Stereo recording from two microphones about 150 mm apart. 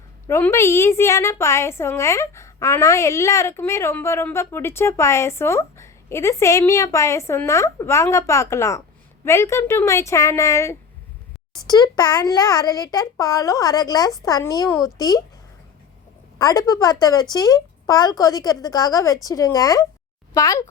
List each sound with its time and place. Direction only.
0.3 s a woman's voice: 15° left (ahead or behind)
16.4 s a woman's voice: 25° left (ahead or behind)